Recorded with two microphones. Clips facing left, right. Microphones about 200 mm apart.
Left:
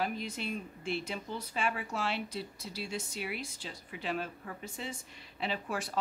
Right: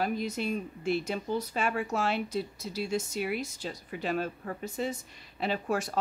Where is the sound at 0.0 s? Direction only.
40° right (ahead or behind).